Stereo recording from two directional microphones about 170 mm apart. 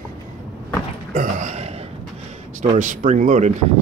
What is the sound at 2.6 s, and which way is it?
Speech, 50° right (ahead or behind).